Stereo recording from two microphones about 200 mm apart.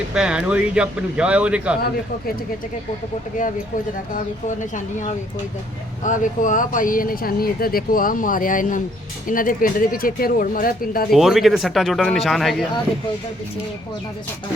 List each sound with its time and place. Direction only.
0.1 s speech: 5° right (ahead or behind)
6.0 s speech: 40° left (ahead or behind)
11.1 s speech: centre (ahead or behind)